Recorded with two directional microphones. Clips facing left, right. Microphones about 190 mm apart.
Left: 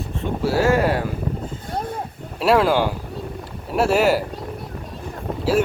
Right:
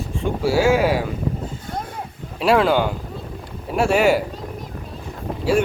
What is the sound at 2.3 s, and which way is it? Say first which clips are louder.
Speech: even; centre (ahead or behind).